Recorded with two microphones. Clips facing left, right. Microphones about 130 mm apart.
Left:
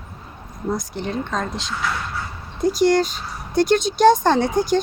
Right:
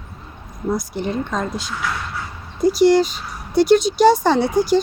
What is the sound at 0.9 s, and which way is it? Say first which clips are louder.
Speech: right 2 dB; 5° right (ahead or behind).